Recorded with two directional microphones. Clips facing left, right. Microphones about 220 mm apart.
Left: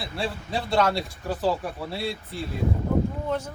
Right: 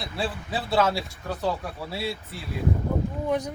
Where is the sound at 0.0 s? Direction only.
Centre (ahead or behind).